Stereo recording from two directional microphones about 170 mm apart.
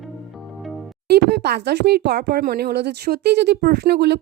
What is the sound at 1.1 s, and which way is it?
Speech, 70° right (ahead or behind).